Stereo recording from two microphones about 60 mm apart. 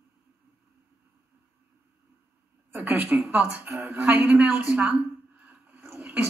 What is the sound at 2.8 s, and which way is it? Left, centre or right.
Speech, right.